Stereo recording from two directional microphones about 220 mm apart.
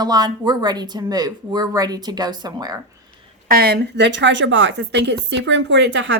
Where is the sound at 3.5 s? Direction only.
45° right (ahead or behind).